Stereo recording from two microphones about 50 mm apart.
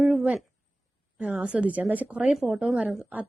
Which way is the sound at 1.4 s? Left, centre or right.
Right.